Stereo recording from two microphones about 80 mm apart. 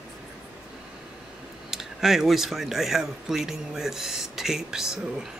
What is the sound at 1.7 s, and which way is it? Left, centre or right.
Speech, centre.